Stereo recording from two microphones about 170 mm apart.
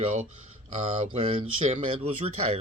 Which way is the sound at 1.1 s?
35° right (ahead or behind).